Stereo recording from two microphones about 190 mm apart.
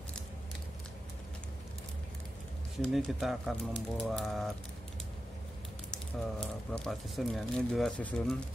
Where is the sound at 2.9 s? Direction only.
Centre (ahead or behind).